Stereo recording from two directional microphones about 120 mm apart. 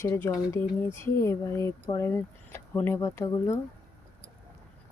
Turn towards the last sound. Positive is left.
turn(degrees=25)  # may be behind; listen again after turning